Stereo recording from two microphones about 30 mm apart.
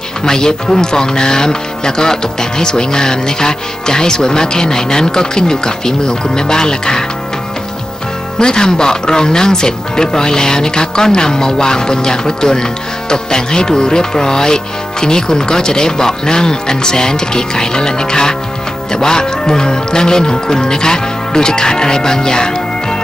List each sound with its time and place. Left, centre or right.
0.2 s speech: left
8.4 s speech: left